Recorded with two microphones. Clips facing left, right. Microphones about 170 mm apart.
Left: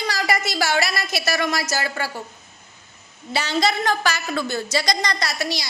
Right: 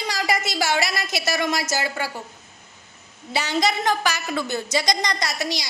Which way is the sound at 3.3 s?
15° right (ahead or behind).